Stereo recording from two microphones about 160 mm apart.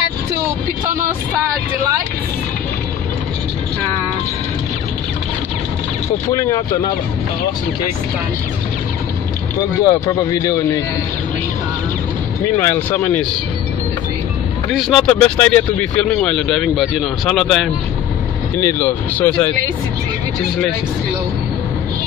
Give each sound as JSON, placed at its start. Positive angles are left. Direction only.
{"t": 6.3, "sound": "speech", "side_deg": 20}
{"t": 9.8, "sound": "speech", "side_deg": 25}
{"t": 12.5, "sound": "speech", "side_deg": 15}
{"t": 14.8, "sound": "speech", "side_deg": 5}
{"t": 18.6, "sound": "speech", "side_deg": 15}